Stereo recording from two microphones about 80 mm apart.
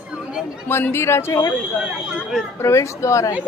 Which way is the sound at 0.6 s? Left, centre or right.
Left.